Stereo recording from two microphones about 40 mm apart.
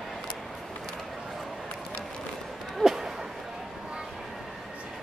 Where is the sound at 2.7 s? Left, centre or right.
Centre.